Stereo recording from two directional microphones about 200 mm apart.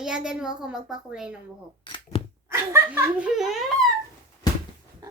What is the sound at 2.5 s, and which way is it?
A child's voice, 15° right (ahead or behind).